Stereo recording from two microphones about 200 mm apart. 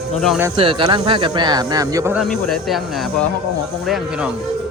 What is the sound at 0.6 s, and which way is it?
Speech, 25° right (ahead or behind).